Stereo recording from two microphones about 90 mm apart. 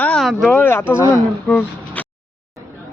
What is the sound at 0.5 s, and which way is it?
Speech, 25° left (ahead or behind).